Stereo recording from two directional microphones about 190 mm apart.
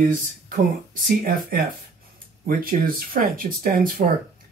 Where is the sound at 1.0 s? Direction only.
50° right (ahead or behind).